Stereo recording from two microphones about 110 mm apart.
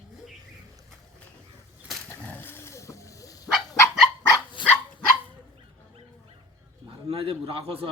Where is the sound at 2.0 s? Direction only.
15° left (ahead or behind).